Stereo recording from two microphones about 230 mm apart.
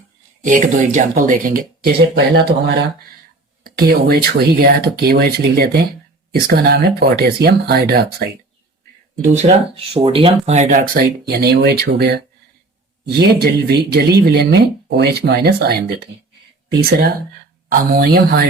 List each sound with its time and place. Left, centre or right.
0.4 s speech: right
9.2 s speech: right
17.7 s speech: right